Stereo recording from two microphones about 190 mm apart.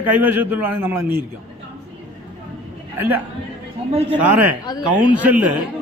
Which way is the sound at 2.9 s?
10° right (ahead or behind).